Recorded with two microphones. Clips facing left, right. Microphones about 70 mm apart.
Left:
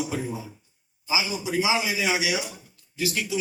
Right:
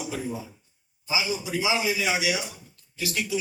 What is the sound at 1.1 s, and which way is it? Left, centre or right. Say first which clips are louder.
A man's voice: left 2 dB; left.